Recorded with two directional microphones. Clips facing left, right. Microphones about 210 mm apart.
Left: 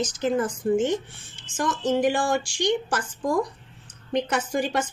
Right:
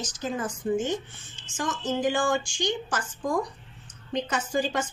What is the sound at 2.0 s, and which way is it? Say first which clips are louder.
Speech: right 1 dB; 70° left (ahead or behind).